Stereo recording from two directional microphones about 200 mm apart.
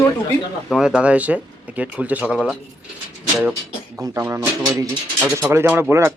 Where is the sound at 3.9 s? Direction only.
15° right (ahead or behind).